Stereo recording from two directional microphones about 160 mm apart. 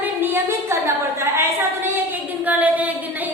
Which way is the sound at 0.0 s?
10° right (ahead or behind).